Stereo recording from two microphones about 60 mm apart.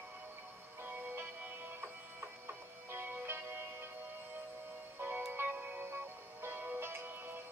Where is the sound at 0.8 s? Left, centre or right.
Right.